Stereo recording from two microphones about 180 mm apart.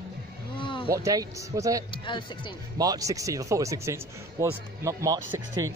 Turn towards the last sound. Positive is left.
turn(degrees=-20)  # may be behind; listen again after turning